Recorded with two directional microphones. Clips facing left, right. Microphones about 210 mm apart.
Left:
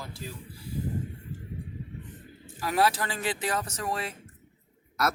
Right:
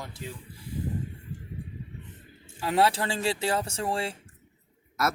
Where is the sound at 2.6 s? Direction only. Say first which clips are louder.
Right 2 dB; 25° right (ahead or behind).